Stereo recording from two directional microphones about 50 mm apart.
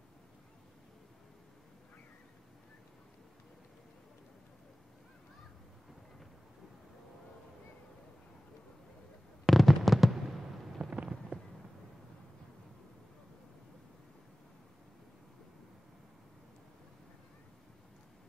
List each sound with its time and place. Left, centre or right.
9.5 s fireworks: centre
10.8 s fireworks: right